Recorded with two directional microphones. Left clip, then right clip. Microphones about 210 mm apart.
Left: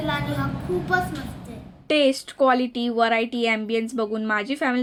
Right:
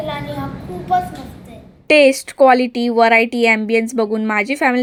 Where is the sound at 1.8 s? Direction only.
30° right (ahead or behind).